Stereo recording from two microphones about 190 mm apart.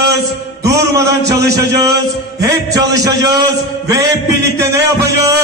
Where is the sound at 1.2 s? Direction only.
60° right (ahead or behind).